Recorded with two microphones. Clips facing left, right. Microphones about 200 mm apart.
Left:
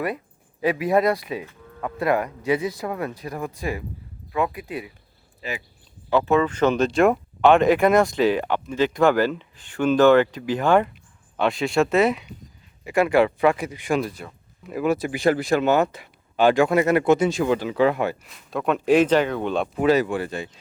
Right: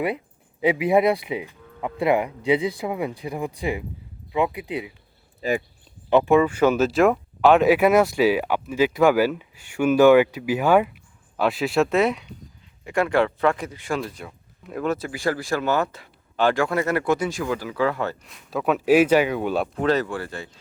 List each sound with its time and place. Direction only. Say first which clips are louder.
0.6 s speech: right 1 dB; 15° right (ahead or behind)
5.4 s speech: right 8 dB; 50° right (ahead or behind)
6.1 s speech: right 3 dB; 15° right (ahead or behind); by 14.2 s 15° left (ahead or behind)
14.3 s speech: left 1 dB; 5° left (ahead or behind)
14.9 s speech: left 5 dB; 15° left (ahead or behind)
18.2 s speech: even; centre (ahead or behind)
19.7 s speech: left 3 dB; 10° left (ahead or behind)